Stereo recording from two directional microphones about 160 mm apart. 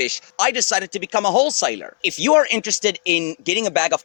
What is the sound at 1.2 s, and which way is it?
Speech, 90° left.